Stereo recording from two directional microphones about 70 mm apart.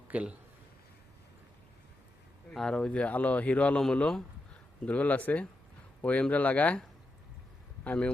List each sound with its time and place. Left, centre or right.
0.1 s a man's voice: right
2.5 s speech: centre
4.9 s speech: left
7.9 s speech: left